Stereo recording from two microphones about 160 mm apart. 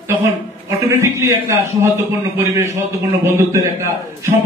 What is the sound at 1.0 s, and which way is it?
A man's voice, 15° right (ahead or behind).